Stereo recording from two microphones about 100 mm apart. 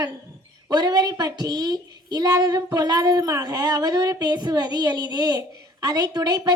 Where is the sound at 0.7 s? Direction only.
45° right (ahead or behind).